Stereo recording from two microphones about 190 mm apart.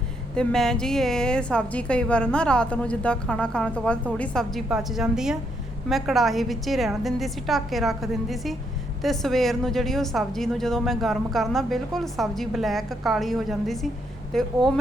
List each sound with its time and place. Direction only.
0.3 s a woman's voice: 5° left (ahead or behind)